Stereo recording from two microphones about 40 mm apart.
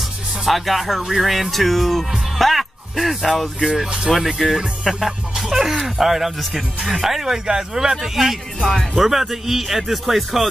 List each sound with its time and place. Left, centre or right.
0.5 s speech: centre
3.8 s speech: centre
4.1 s speech: centre
8.5 s speech: centre
8.9 s speech: centre